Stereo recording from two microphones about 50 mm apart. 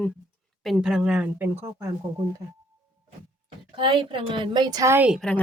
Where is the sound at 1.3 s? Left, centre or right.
Right.